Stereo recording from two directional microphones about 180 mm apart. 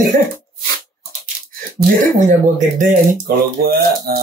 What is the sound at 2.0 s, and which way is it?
Speech, 45° right (ahead or behind).